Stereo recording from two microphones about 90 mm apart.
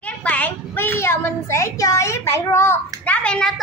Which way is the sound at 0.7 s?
25° left (ahead or behind).